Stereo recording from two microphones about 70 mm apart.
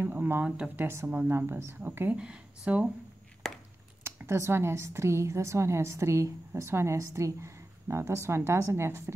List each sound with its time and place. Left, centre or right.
0.0 s a woman's voice: right
2.1 s speech: centre
4.0 s a woman's voice: right